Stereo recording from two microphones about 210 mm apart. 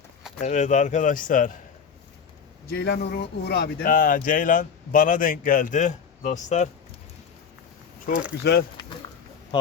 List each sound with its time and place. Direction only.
0.3 s speech: 35° left (ahead or behind)
2.6 s speech: 50° left (ahead or behind); by 6.7 s 35° left (ahead or behind)
8.1 s speech: 45° left (ahead or behind)